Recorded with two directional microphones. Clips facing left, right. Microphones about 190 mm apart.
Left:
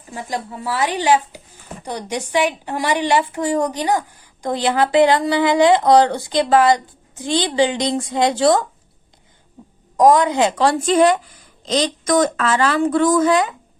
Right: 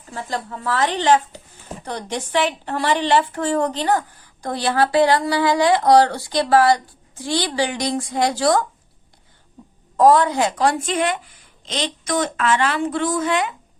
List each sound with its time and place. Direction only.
0.1 s a woman's voice: 15° left (ahead or behind)
10.0 s a woman's voice: 15° left (ahead or behind); by 13.5 s 40° left (ahead or behind)